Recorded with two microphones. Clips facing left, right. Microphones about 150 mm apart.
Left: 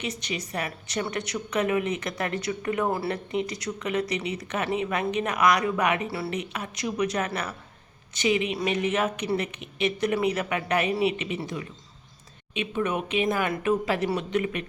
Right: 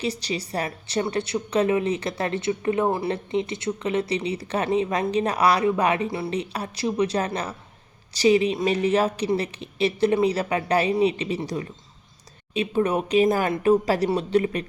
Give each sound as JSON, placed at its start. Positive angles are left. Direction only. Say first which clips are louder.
{"t": 0.0, "sound": "a woman's voice", "louder": "right 5 dB", "side_deg": -35}
{"t": 6.1, "sound": "speech", "louder": "right 3 dB", "side_deg": -20}
{"t": 6.3, "sound": "a woman's voice", "louder": "right 4 dB", "side_deg": -35}